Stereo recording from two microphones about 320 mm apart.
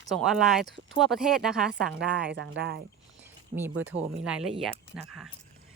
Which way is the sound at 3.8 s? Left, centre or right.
Centre.